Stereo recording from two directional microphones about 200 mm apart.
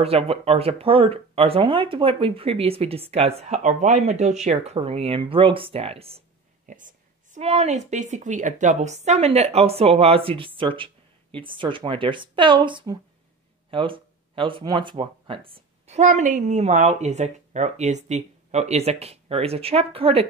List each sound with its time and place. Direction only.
0.0 s speech: 30° right (ahead or behind)
6.6 s a woman's voice: 40° right (ahead or behind)